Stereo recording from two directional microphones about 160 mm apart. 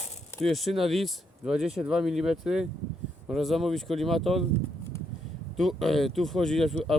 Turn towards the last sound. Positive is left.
turn(degrees=0)  # may be behind; listen again after turning